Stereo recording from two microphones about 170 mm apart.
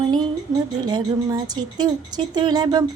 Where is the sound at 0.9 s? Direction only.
25° right (ahead or behind).